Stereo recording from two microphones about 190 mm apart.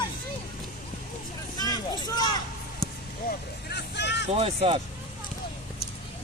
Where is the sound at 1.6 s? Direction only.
20° left (ahead or behind).